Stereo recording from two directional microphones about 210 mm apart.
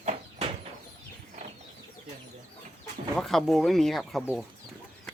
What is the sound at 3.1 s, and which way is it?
Speech, centre (ahead or behind).